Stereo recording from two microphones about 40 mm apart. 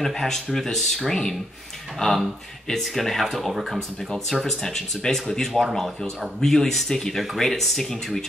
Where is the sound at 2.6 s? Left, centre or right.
Centre.